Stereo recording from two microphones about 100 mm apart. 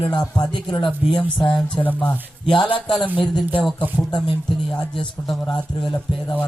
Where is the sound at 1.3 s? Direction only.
55° left (ahead or behind).